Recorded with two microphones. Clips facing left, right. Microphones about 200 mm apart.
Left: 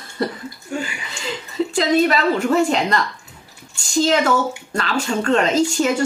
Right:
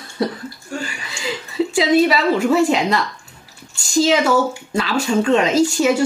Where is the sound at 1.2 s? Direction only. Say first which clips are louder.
Right 2 dB; 10° right (ahead or behind).